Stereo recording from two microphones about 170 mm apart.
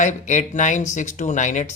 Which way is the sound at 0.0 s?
45° left (ahead or behind).